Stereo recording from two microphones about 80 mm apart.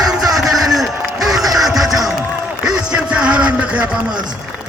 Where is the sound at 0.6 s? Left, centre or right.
Centre.